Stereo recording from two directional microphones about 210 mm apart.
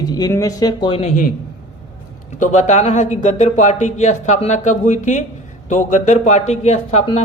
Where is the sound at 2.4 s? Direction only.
35° left (ahead or behind).